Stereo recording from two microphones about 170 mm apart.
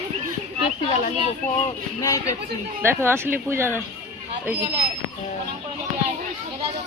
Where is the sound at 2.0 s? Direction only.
20° left (ahead or behind).